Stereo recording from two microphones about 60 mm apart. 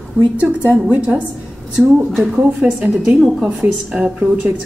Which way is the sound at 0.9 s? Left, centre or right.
Centre.